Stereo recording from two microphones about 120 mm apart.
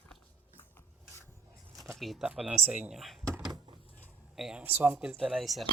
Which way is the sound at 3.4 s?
35° right (ahead or behind).